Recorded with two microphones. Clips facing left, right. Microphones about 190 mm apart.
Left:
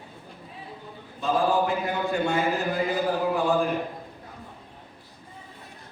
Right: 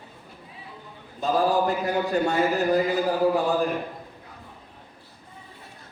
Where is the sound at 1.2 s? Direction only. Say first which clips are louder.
Right 1 dB; 40° right (ahead or behind).